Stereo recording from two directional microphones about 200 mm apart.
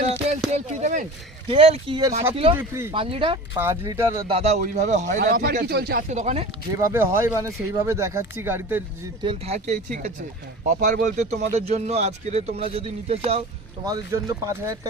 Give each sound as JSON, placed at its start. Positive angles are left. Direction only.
{"t": 0.1, "sound": "a sound", "side_deg": -30}
{"t": 1.5, "sound": "speech", "side_deg": -30}
{"t": 2.6, "sound": "speech", "side_deg": -15}
{"t": 2.9, "sound": "speech", "side_deg": -25}
{"t": 3.5, "sound": "speech", "side_deg": -15}
{"t": 4.3, "sound": "speech", "side_deg": -30}
{"t": 5.6, "sound": "speech", "side_deg": -50}
{"t": 6.1, "sound": "speech", "side_deg": -35}
{"t": 6.9, "sound": "speech", "side_deg": -10}
{"t": 9.2, "sound": "speech", "side_deg": -30}
{"t": 13.8, "sound": "speech", "side_deg": -15}